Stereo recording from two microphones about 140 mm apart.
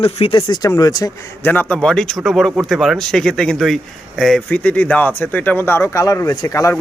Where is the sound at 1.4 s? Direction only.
10° left (ahead or behind).